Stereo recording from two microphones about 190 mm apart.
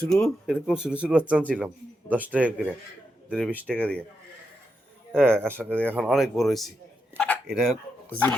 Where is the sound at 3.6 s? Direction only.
5° left (ahead or behind).